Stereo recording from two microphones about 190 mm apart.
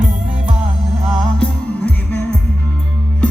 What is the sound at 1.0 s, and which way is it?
Music, centre (ahead or behind).